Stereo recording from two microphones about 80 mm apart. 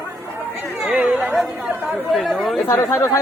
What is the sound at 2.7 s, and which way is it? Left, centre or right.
Speech, left.